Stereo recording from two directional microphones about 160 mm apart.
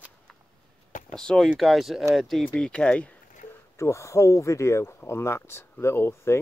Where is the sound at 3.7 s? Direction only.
20° left (ahead or behind).